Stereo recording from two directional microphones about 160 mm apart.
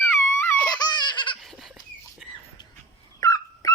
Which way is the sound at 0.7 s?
25° left (ahead or behind).